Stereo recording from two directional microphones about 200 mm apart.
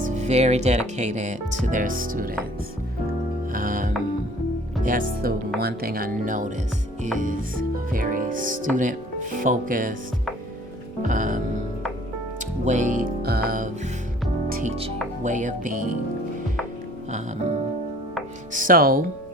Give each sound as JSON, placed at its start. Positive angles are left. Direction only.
{"t": 0.0, "sound": "speech", "side_deg": -35}
{"t": 3.5, "sound": "music", "side_deg": -45}
{"t": 4.8, "sound": "speech", "side_deg": -45}
{"t": 11.0, "sound": "speech", "side_deg": -40}
{"t": 12.6, "sound": "speech", "side_deg": -40}
{"t": 15.2, "sound": "speech", "side_deg": -40}
{"t": 18.5, "sound": "speech", "side_deg": -45}